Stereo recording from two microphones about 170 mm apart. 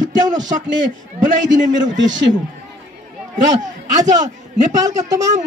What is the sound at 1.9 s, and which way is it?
Speech, 90° right.